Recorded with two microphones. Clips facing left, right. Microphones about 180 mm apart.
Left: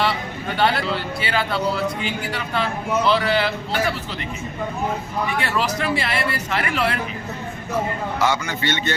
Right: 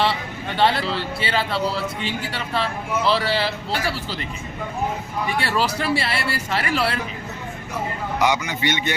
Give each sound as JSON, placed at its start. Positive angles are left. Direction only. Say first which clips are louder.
{"t": 0.0, "sound": "speech", "louder": "even", "side_deg": -30}
{"t": 5.4, "sound": "speech", "louder": "right 2 dB", "side_deg": -35}
{"t": 8.2, "sound": "a man's voice", "louder": "right 1 dB", "side_deg": -15}